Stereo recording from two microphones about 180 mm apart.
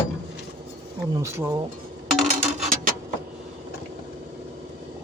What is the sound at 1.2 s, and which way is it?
Speech, 15° right (ahead or behind).